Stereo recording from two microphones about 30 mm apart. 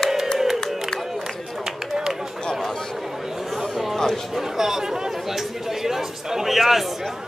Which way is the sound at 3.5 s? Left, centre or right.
Centre.